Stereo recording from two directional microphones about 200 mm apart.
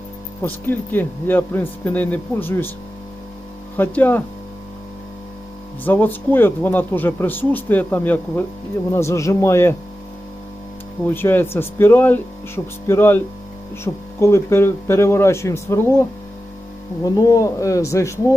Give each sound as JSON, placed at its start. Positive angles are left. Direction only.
{"t": 0.4, "sound": "speech", "side_deg": 10}
{"t": 3.8, "sound": "speech", "side_deg": 10}
{"t": 5.8, "sound": "speech", "side_deg": 10}
{"t": 11.0, "sound": "speech", "side_deg": 10}